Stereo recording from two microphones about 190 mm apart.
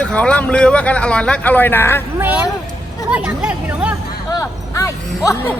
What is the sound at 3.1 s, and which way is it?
Speech, 5° right (ahead or behind).